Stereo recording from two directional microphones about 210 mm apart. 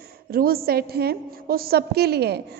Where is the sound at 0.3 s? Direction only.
45° right (ahead or behind).